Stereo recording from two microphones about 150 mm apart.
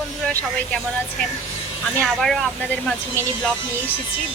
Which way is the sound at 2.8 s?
5° left (ahead or behind).